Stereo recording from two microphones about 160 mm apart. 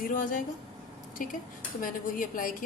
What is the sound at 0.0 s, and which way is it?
A woman's voice, 55° left (ahead or behind).